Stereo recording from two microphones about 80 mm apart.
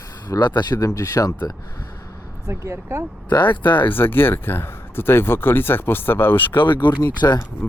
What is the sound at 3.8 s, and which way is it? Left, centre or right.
Speech, left.